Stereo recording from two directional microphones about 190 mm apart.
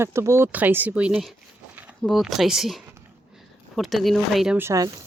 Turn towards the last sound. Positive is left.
turn(degrees=-20)  # may be behind; listen again after turning